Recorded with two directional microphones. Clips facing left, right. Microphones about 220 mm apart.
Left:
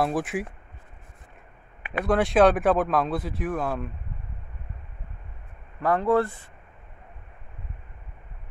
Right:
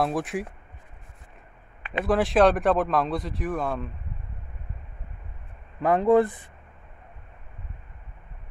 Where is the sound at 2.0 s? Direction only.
Centre (ahead or behind).